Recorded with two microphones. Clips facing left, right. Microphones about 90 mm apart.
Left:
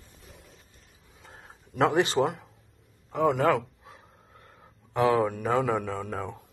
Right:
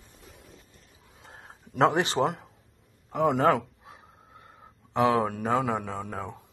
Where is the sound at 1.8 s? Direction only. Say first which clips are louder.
Even; 30° right (ahead or behind).